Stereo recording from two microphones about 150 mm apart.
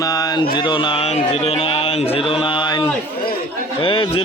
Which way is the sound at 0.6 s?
35° left (ahead or behind).